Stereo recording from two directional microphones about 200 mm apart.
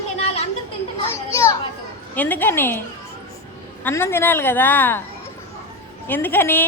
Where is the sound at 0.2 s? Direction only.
30° left (ahead or behind).